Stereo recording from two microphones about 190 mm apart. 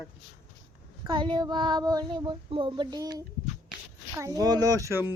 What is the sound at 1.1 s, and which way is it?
Child singing, 25° right (ahead or behind).